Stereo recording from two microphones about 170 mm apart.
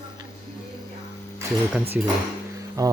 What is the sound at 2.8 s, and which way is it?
Speech, 20° right (ahead or behind).